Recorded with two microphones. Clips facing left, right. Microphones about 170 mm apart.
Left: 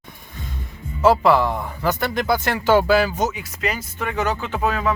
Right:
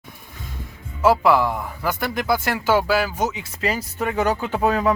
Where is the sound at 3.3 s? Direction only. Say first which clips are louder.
Right 1 dB; 30° right (ahead or behind).